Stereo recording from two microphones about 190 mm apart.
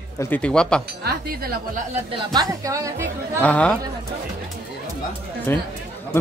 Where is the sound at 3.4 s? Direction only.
5° left (ahead or behind).